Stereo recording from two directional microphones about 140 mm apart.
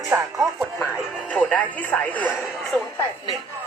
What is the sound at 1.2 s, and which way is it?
Speech, 10° left (ahead or behind).